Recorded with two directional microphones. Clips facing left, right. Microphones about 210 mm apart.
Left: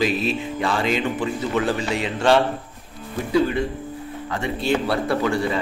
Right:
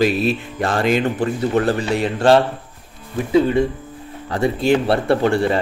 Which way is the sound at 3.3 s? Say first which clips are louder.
Right 5 dB; 25° right (ahead or behind).